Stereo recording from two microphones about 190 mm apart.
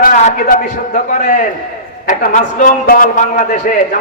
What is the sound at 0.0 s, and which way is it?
A man's voice, 40° left (ahead or behind).